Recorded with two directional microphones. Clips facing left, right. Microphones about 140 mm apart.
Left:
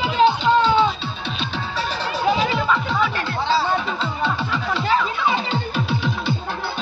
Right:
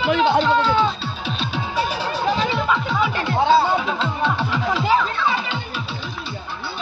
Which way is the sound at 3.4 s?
55° right (ahead or behind).